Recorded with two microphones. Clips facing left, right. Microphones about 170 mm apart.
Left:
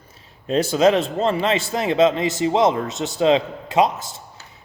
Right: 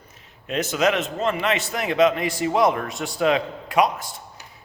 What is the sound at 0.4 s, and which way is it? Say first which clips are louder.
A man's voice: left 5 dB; 30° left (ahead or behind).